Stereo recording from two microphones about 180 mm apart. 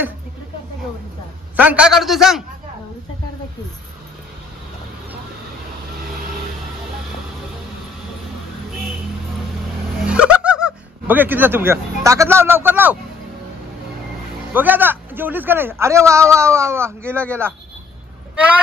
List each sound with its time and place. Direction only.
1.6 s a man's voice: 5° right (ahead or behind)
10.0 s speech: 5° right (ahead or behind)
14.5 s a man's voice: 10° right (ahead or behind)